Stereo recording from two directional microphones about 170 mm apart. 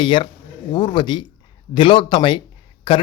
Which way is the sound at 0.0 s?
30° left (ahead or behind).